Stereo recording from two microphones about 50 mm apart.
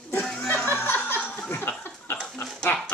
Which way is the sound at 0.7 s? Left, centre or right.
Left.